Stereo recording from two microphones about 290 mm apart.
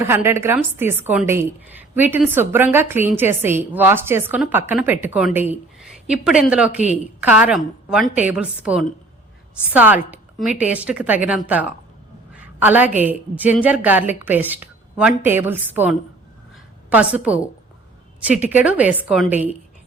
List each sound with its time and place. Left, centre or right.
0.0 s a woman's voice: centre
12.3 s a sound: centre
13.0 s a woman's voice: centre
18.3 s a woman's voice: centre